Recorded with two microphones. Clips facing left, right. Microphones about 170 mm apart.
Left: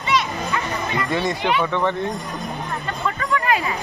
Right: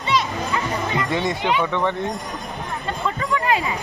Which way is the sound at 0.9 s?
20° right (ahead or behind).